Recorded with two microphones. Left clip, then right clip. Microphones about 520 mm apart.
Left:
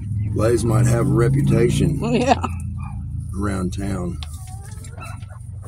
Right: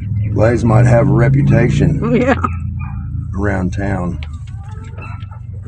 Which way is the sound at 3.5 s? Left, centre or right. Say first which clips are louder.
Right 9 dB; left.